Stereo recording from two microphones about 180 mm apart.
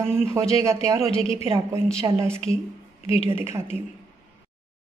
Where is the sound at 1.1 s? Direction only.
30° left (ahead or behind).